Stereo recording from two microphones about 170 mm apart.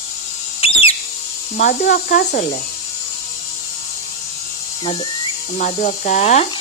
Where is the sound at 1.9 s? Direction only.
60° left (ahead or behind).